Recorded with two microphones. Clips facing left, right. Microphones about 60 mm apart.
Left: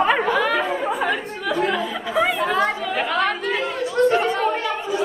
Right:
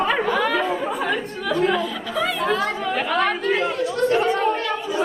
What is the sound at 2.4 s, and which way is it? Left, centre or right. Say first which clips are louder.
Chatter: left 1 dB; centre.